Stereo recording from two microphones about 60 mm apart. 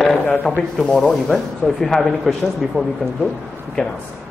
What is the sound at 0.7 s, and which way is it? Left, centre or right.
A man's voice, centre.